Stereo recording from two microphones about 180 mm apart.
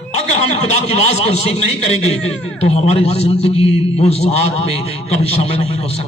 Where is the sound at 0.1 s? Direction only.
40° left (ahead or behind).